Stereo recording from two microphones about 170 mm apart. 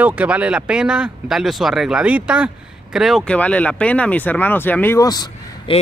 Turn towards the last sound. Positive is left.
turn(degrees=30)  # may be behind; listen again after turning